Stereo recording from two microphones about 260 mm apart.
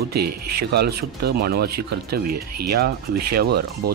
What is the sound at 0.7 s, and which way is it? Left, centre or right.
Speech, right.